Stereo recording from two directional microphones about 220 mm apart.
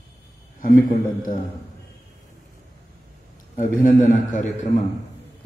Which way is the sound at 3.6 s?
35° left (ahead or behind).